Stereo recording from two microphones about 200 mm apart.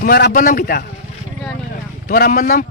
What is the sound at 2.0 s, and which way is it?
Speech, 45° left (ahead or behind).